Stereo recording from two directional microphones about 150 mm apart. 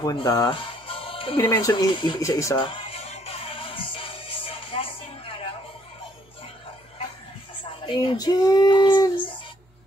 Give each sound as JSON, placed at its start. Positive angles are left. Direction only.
{"t": 0.0, "sound": "speech", "side_deg": 30}
{"t": 1.4, "sound": "speech", "side_deg": 15}
{"t": 1.7, "sound": "speech", "side_deg": 30}
{"t": 2.5, "sound": "music", "side_deg": 35}
{"t": 7.6, "sound": "speech", "side_deg": 35}